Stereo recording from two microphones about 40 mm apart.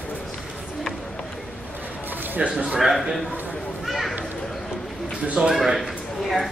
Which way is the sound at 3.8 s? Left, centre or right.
Centre.